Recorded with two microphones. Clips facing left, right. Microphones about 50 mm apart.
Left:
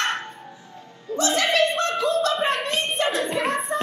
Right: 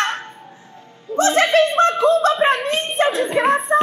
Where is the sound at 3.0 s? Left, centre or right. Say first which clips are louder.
Right 8 dB; right.